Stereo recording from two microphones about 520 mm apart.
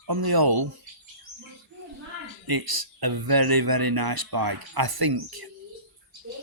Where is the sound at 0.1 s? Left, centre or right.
Right.